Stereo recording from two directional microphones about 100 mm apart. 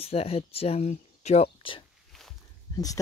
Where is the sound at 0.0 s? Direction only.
80° left.